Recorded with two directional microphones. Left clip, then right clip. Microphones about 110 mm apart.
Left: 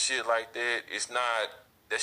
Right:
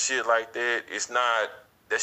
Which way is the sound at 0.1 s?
45° right (ahead or behind).